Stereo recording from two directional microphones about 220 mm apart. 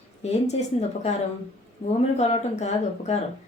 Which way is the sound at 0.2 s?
30° left (ahead or behind).